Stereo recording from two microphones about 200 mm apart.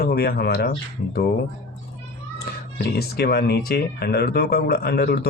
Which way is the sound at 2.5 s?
50° left (ahead or behind).